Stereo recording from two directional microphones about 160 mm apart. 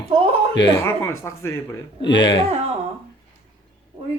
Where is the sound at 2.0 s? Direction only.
90° left.